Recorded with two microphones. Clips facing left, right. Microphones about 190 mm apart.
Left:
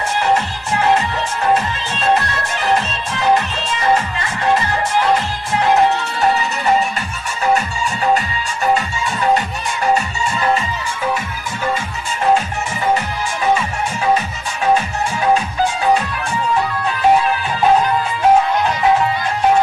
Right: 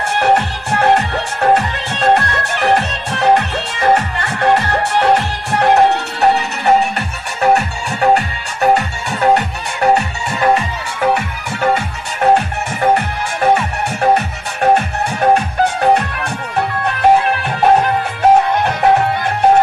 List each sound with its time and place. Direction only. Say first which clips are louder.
0.2 s music: right 4 dB; 60° right (ahead or behind)